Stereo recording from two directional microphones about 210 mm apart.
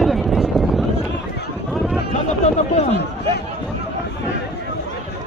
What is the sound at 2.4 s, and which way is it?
Speech, 30° left (ahead or behind).